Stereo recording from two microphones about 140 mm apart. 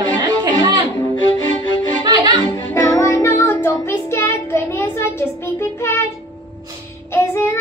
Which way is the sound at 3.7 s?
20° left (ahead or behind).